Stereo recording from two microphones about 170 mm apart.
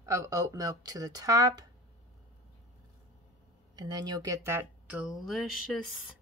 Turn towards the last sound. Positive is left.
turn(degrees=0)  # may be behind; listen again after turning